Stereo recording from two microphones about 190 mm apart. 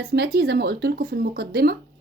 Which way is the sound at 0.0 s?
50° right (ahead or behind).